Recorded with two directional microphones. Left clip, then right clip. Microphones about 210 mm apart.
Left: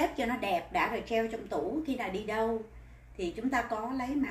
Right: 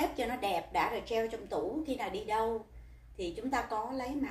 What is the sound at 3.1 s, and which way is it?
Speech, 20° left (ahead or behind).